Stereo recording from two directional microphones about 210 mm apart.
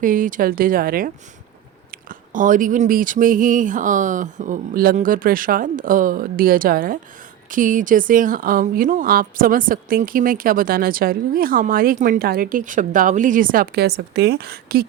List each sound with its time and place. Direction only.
0.0 s speech: 40° right (ahead or behind)